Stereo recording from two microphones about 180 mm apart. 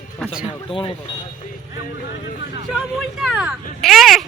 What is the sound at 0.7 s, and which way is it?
Speech, 30° left (ahead or behind).